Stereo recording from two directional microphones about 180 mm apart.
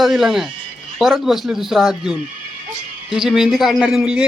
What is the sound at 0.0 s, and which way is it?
Speech, centre (ahead or behind).